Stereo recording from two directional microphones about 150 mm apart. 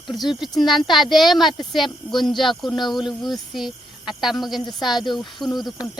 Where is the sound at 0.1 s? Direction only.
Centre (ahead or behind).